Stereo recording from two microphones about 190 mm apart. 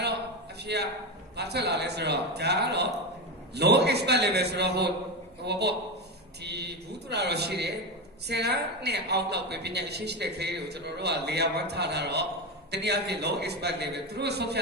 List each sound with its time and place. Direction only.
0.6 s a man's voice: 60° right (ahead or behind)